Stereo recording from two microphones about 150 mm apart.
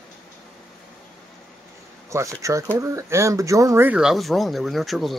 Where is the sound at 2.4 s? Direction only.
20° right (ahead or behind); by 5.2 s centre (ahead or behind).